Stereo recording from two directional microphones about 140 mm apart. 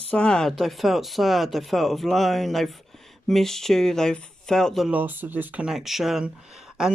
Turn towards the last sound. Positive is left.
turn(degrees=-5)  # may be behind; listen again after turning